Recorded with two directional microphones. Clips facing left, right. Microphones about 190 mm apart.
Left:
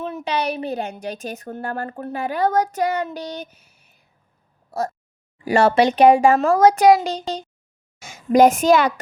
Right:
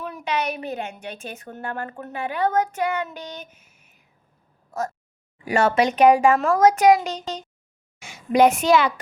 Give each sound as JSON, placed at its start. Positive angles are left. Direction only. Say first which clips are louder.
{"t": 0.0, "sound": "a woman's voice", "louder": "left 3 dB", "side_deg": 25}